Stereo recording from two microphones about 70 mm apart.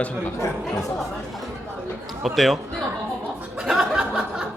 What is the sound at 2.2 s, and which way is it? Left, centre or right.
Speech, centre.